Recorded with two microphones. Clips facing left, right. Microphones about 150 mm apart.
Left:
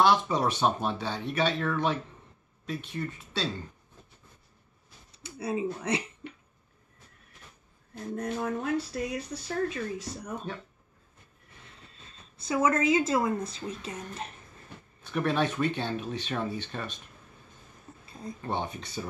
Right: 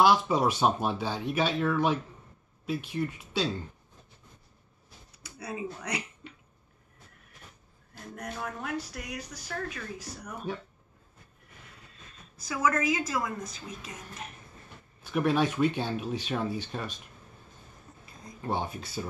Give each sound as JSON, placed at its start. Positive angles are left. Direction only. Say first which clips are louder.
{"t": 0.0, "sound": "speech", "louder": "right 1 dB", "side_deg": -5}
{"t": 5.1, "sound": "speech", "louder": "left 7 dB", "side_deg": 25}
{"t": 8.1, "sound": "speech", "louder": "left 7 dB", "side_deg": 25}
{"t": 12.0, "sound": "speech", "louder": "right 1 dB", "side_deg": 30}
{"t": 15.0, "sound": "speech", "louder": "right 2 dB", "side_deg": -10}
{"t": 18.4, "sound": "speech", "louder": "right 1 dB", "side_deg": -5}